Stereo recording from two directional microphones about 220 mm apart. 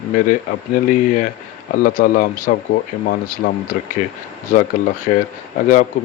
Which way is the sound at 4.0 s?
35° left (ahead or behind).